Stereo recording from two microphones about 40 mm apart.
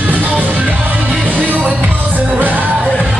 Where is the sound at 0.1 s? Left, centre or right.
Right.